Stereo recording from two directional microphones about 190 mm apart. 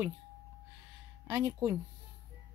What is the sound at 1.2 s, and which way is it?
Speech, 15° right (ahead or behind).